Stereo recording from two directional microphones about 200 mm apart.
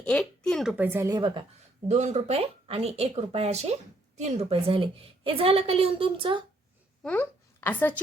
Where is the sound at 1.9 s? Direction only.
35° right (ahead or behind).